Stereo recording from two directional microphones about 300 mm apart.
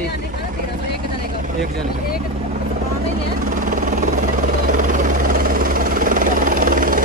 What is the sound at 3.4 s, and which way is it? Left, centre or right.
Vehicle, right.